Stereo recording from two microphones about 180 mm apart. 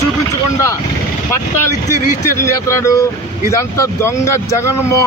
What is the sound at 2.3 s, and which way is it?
Speech, 15° left (ahead or behind).